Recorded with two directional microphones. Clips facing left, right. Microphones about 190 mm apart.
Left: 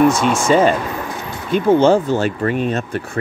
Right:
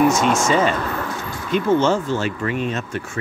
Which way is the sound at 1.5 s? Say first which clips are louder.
Left 5 dB; 35° left (ahead or behind).